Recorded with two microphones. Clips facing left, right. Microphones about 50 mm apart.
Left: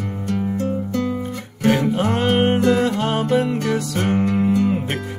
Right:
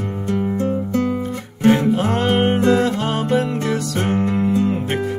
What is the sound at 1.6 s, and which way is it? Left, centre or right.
Music, right.